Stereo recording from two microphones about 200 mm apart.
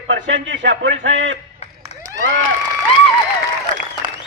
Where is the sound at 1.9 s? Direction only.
30° left (ahead or behind).